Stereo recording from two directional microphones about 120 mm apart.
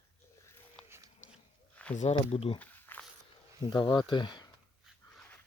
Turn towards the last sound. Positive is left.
turn(degrees=40)  # may be behind; listen again after turning